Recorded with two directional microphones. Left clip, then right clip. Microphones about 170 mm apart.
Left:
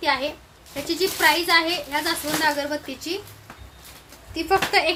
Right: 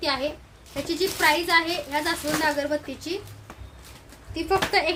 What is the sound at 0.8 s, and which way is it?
A woman's voice, centre (ahead or behind).